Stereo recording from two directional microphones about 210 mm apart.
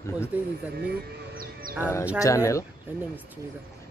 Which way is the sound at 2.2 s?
15° left (ahead or behind).